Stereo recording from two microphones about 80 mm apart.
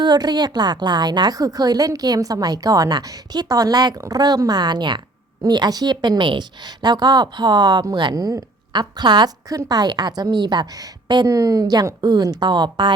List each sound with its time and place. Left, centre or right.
0.0 s a woman's voice: right
1.4 s a woman's voice: right
5.4 s a woman's voice: right
6.8 s a woman's voice: right
9.5 s a woman's voice: right
11.3 s a woman's voice: right